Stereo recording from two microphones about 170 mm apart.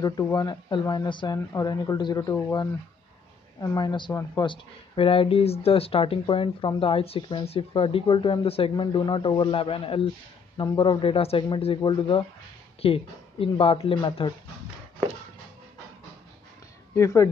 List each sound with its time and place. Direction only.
0.0 s speech: 15° left (ahead or behind)
3.5 s speech: 20° left (ahead or behind)
16.9 s speech: 15° left (ahead or behind)